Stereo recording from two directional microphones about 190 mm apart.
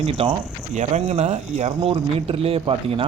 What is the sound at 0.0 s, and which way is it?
Speech, 30° right (ahead or behind).